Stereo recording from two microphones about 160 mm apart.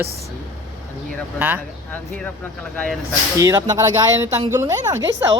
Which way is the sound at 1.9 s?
10° left (ahead or behind).